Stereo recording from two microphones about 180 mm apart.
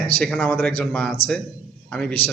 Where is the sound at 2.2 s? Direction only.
35° left (ahead or behind).